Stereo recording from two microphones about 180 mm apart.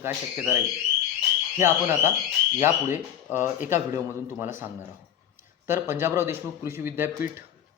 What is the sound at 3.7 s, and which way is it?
Speech, 15° right (ahead or behind).